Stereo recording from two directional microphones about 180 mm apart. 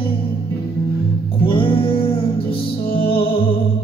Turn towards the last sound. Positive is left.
turn(degrees=30)  # may be behind; listen again after turning